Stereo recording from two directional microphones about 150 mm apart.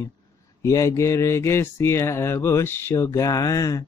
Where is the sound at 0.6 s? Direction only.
20° left (ahead or behind).